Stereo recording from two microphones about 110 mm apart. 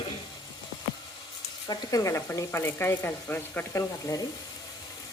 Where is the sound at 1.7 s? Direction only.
30° left (ahead or behind).